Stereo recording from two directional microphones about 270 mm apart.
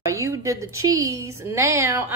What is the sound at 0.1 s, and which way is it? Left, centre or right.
A woman's voice, centre.